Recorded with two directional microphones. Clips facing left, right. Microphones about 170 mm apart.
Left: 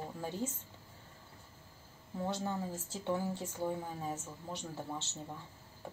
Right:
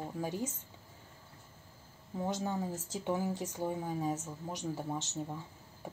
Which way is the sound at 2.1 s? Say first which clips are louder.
Right 2 dB; 15° right (ahead or behind).